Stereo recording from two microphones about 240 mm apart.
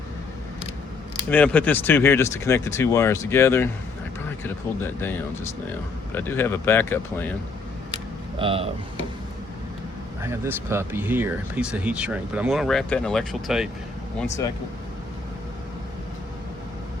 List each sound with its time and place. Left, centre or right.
1.3 s speech: centre
8.4 s speech: right
10.2 s speech: centre